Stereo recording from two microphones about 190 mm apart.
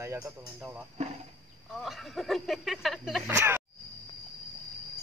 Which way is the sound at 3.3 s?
10° right (ahead or behind).